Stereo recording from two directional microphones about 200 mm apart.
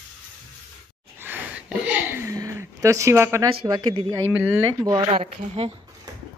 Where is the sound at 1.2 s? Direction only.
5° right (ahead or behind).